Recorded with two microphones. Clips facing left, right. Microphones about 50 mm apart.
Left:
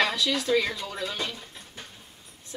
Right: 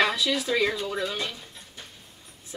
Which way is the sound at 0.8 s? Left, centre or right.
Centre.